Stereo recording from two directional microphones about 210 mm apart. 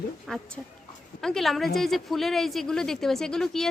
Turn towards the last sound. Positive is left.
turn(degrees=0)  # may be behind; listen again after turning